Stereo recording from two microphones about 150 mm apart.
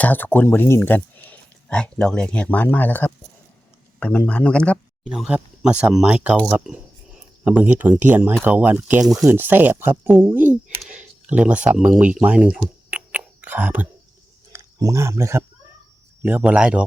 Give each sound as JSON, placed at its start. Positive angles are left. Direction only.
{"t": 0.0, "sound": "speech", "side_deg": 10}
{"t": 5.0, "sound": "speech", "side_deg": -5}
{"t": 16.2, "sound": "speech", "side_deg": -10}